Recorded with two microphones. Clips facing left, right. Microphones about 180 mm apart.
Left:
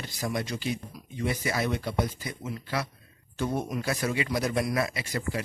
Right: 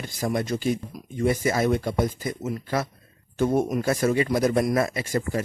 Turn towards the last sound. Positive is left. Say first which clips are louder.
# right 6 dB
turn(degrees=-45)  # may be behind; listen again after turning